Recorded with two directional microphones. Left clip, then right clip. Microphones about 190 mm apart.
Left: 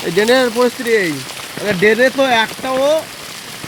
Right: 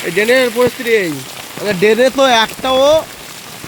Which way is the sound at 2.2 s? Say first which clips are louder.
Right 3 dB; 20° right (ahead or behind).